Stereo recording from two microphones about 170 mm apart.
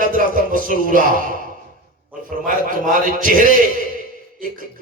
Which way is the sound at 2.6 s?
55° right (ahead or behind).